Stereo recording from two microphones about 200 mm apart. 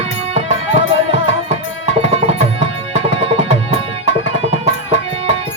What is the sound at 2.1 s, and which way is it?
Tabla, 30° right (ahead or behind).